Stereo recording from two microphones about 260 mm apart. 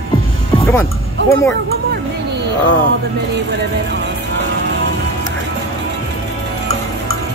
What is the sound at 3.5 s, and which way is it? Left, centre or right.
Speech, right.